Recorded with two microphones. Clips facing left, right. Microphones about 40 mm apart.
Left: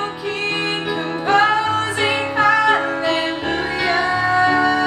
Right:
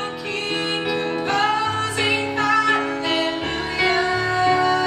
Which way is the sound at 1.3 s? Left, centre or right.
Centre.